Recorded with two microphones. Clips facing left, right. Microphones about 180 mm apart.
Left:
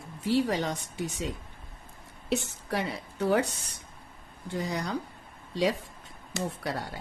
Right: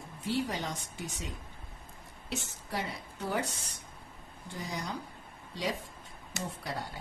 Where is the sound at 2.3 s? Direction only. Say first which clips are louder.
Left 7 dB; 70° left (ahead or behind).